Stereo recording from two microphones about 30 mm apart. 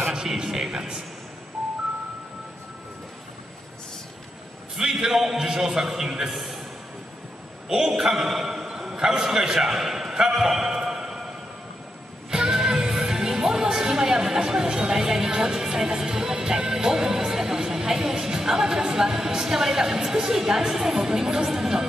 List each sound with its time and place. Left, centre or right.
0.4 s a man's voice: centre
4.7 s a man's voice: centre
6.3 s a sound: centre
7.6 s a man's voice: centre
8.2 s a sound: centre
8.8 s a man's voice: right
12.3 s music: right
21.5 s speech: centre